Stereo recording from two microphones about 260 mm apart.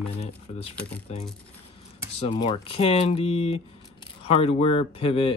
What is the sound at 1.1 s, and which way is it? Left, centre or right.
Speech, left.